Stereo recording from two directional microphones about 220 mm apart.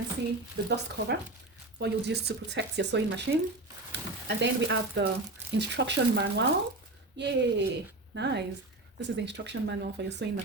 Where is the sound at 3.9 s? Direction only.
50° right (ahead or behind).